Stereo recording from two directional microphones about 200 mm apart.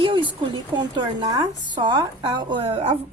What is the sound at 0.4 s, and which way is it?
Speech, 25° right (ahead or behind).